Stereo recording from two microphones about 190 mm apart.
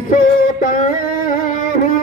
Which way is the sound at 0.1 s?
45° left (ahead or behind).